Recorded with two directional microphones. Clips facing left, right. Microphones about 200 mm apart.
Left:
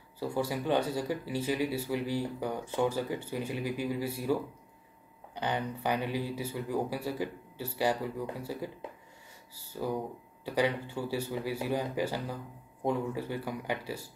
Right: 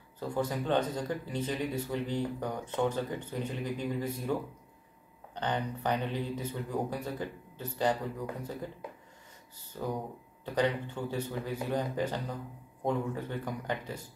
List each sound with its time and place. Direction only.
0.2 s speech: 10° left (ahead or behind)